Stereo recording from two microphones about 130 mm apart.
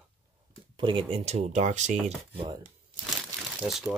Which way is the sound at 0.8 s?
40° right (ahead or behind).